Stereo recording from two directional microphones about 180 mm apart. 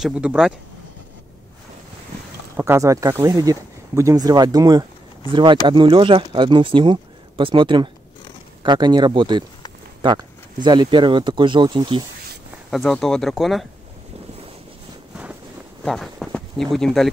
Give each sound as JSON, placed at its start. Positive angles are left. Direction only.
{"t": 0.0, "sound": "speech", "side_deg": -5}
{"t": 2.5, "sound": "speech", "side_deg": -15}
{"t": 12.7, "sound": "speech", "side_deg": 0}
{"t": 15.8, "sound": "a sound", "side_deg": 0}
{"t": 16.7, "sound": "speech", "side_deg": 0}